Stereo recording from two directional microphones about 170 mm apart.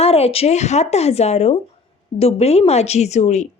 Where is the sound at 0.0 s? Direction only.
35° left (ahead or behind).